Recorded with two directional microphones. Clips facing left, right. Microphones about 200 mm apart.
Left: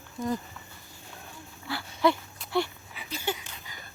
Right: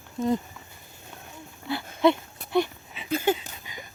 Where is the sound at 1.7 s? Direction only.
20° right (ahead or behind).